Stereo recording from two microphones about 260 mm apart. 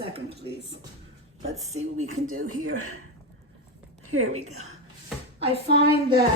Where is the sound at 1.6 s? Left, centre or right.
Right.